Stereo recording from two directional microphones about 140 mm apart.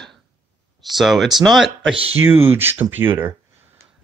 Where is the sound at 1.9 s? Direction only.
45° right (ahead or behind).